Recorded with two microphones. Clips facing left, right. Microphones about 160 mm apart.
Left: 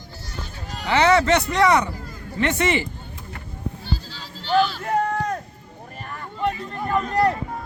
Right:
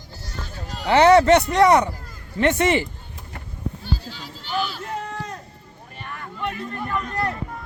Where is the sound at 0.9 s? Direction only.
50° right (ahead or behind).